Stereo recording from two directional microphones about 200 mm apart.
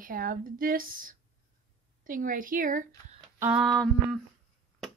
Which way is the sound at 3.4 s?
5° right (ahead or behind).